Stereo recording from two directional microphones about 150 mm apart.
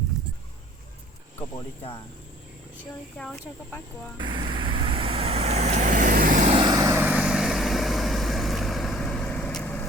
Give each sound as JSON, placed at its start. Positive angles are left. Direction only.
{"t": 4.2, "sound": "vehicle", "side_deg": -30}
{"t": 6.5, "sound": "vehicle", "side_deg": -30}